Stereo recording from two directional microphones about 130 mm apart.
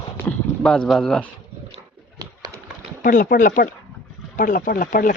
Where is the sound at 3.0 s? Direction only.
90° left.